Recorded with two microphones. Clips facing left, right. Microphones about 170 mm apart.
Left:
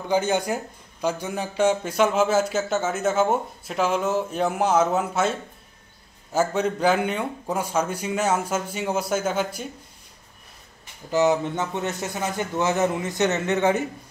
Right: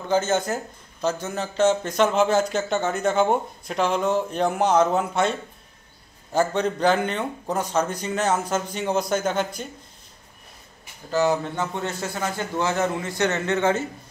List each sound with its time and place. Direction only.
0.1 s speech: 15° left (ahead or behind)
11.1 s a man's voice: 20° left (ahead or behind)